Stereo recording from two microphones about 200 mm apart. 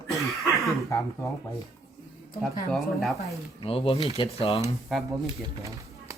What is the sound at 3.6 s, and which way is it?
Speech, 25° left (ahead or behind).